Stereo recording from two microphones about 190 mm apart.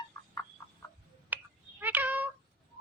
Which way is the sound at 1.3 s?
10° right (ahead or behind).